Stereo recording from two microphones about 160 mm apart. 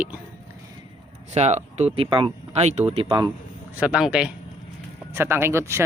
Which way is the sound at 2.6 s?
45° right (ahead or behind).